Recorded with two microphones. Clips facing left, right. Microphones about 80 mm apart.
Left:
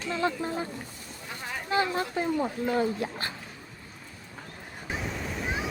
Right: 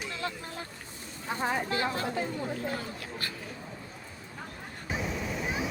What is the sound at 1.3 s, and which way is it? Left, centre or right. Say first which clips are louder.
Speech: right 9 dB; right.